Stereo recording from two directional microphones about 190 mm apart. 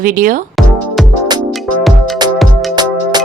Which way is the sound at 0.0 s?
45° right (ahead or behind).